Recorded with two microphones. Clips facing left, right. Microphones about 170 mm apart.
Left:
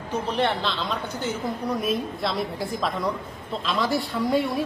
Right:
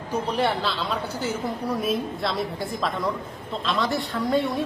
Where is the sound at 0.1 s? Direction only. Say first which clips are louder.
Even; 10° right (ahead or behind).